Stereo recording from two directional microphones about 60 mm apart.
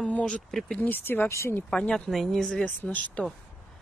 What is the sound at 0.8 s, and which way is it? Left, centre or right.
Speech, left.